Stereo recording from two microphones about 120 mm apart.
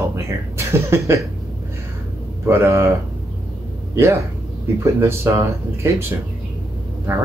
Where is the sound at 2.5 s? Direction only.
20° right (ahead or behind).